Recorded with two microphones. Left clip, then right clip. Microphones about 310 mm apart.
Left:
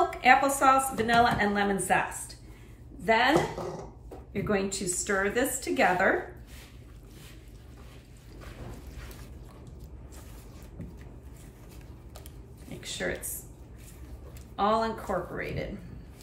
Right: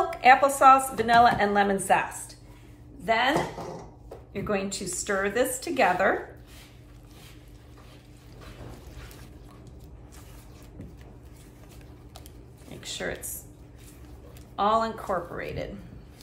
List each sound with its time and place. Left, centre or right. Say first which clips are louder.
0.1 s a woman's voice: right 3 dB; centre
12.8 s speech: even; centre
14.5 s a woman's voice: right 2 dB; centre